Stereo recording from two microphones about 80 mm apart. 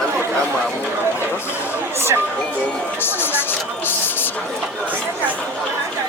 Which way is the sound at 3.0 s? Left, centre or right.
Left.